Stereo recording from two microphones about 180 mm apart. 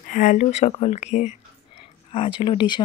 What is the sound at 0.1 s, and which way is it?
Speech, 45° left (ahead or behind).